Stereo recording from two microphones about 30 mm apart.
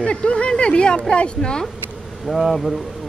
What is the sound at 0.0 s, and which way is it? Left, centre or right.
Speech, left.